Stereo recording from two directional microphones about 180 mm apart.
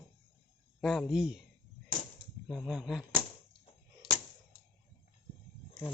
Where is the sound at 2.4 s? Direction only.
Centre (ahead or behind).